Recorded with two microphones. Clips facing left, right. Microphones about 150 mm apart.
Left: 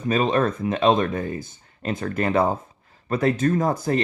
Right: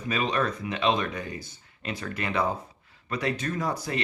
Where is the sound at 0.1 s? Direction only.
45° left (ahead or behind).